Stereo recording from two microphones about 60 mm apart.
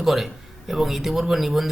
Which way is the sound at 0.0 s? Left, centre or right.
Centre.